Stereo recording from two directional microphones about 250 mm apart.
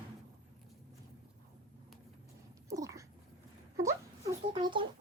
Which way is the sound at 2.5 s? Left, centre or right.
Centre.